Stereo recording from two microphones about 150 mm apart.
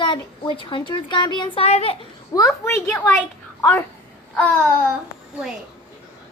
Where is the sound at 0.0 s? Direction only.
35° left (ahead or behind).